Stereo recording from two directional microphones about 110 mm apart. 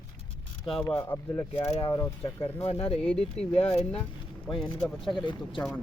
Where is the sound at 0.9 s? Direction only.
25° left (ahead or behind).